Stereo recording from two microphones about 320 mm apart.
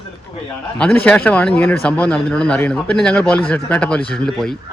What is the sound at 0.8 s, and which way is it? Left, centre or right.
A man's voice, centre.